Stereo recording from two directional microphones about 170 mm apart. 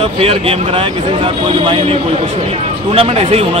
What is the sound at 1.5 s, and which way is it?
A man's voice, 30° right (ahead or behind).